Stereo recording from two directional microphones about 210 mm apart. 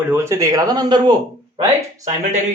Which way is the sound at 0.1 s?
15° right (ahead or behind).